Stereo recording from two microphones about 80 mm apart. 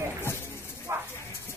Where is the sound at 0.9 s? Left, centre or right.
Right.